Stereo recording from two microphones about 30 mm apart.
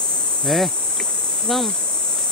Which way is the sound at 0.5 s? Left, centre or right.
Centre.